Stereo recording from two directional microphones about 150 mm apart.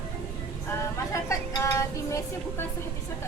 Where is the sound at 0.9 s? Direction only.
20° left (ahead or behind).